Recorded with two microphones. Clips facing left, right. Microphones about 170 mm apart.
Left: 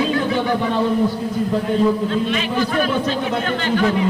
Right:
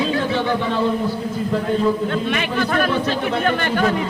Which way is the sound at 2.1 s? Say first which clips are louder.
Left 1 dB; 60° right (ahead or behind).